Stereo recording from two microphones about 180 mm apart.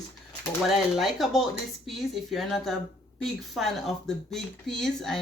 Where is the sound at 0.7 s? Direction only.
Centre (ahead or behind).